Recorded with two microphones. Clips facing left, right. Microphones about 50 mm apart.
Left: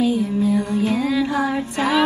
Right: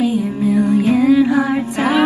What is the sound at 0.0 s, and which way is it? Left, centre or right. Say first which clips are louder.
Music: right 2 dB; right.